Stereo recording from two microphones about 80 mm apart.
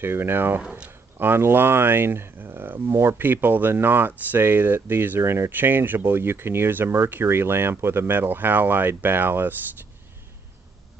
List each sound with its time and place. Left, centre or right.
0.0 s speech: right
0.6 s speech: centre
1.1 s speech: right